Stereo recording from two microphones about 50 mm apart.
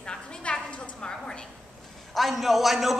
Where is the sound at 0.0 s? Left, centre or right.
Centre.